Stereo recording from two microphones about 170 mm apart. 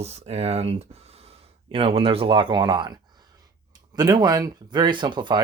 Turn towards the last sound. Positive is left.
turn(degrees=-25)  # may be behind; listen again after turning